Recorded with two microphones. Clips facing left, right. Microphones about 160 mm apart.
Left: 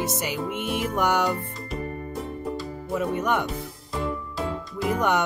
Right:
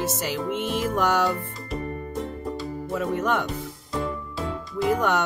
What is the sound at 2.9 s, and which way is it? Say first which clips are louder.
Speech: even; 15° left (ahead or behind).